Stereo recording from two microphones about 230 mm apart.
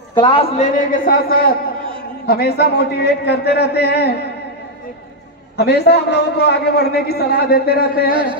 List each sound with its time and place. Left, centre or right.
0.1 s a man's voice: left
5.6 s a man's voice: left
8.1 s speech: right